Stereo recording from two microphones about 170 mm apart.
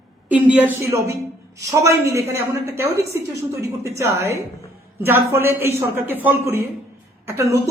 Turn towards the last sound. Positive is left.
turn(degrees=-15)  # may be behind; listen again after turning